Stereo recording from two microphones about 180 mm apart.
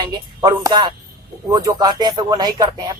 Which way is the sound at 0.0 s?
25° right (ahead or behind).